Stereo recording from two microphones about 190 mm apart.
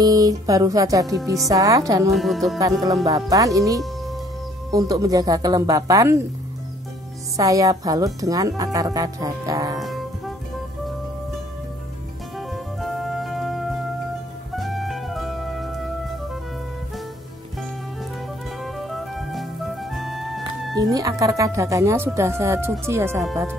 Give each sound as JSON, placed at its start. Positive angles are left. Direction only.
{"t": 0.0, "sound": "speech", "side_deg": -20}
{"t": 2.0, "sound": "speech", "side_deg": 0}
{"t": 2.6, "sound": "speech", "side_deg": -20}
{"t": 7.3, "sound": "speech", "side_deg": -15}
{"t": 9.8, "sound": "music", "side_deg": 0}
{"t": 12.4, "sound": "music", "side_deg": 0}
{"t": 18.6, "sound": "music", "side_deg": 0}
{"t": 20.7, "sound": "speech", "side_deg": -20}